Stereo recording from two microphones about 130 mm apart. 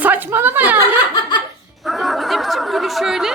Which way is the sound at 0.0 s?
15° right (ahead or behind).